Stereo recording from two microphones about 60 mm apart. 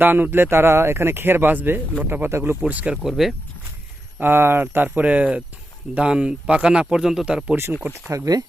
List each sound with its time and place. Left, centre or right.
0.0 s speech: right
2.6 s speech: right
2.9 s speech: centre
4.2 s speech: right; by 7.5 s centre
7.5 s speech: right
8.1 s speech: right